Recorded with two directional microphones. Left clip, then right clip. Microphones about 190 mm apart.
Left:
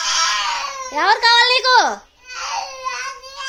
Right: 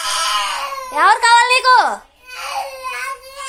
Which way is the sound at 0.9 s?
25° left (ahead or behind).